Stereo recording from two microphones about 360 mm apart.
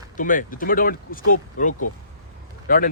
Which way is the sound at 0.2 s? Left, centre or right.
Left.